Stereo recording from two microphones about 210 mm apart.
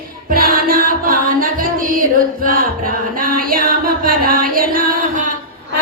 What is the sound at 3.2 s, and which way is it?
Music, 40° right (ahead or behind).